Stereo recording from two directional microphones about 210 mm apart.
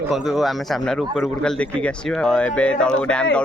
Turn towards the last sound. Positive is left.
turn(degrees=5)  # may be behind; listen again after turning